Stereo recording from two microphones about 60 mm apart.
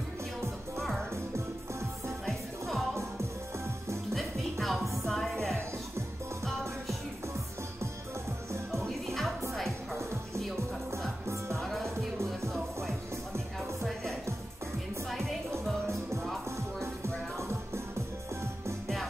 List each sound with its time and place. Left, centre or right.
0.7 s music: centre
2.2 s music: centre
4.1 s music: centre
8.7 s music: centre
11.5 s music: centre
15.0 s music: centre
16.8 s music: right